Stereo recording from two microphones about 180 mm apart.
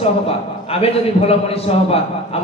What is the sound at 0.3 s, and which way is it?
A man's voice, 35° left (ahead or behind).